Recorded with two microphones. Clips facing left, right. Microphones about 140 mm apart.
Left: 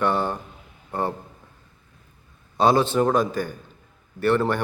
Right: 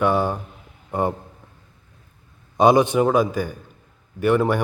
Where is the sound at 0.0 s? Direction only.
10° right (ahead or behind).